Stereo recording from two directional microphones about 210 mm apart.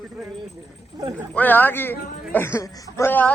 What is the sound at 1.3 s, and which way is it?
A man's voice, 10° left (ahead or behind).